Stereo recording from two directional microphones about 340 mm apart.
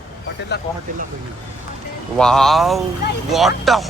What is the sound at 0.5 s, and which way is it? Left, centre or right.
Speech, left.